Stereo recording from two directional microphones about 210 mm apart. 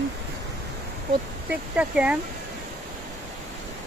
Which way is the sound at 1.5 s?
5° right (ahead or behind).